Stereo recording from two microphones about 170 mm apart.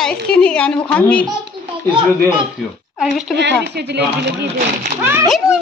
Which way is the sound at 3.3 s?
85° right.